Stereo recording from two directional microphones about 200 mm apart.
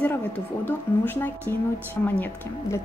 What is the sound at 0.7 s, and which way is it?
Speech, 10° left (ahead or behind).